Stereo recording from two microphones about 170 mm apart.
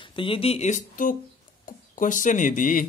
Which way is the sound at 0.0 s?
30° left (ahead or behind).